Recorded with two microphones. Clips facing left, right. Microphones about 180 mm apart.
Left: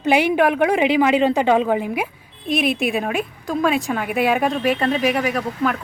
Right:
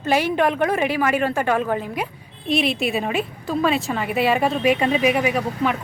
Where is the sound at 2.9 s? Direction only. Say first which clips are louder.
Left 1 dB; centre (ahead or behind).